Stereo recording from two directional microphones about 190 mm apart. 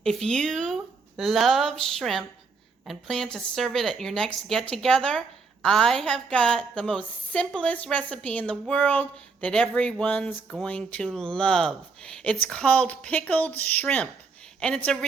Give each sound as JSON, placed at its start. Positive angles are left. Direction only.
{"t": 0.0, "sound": "a woman's voice", "side_deg": 0}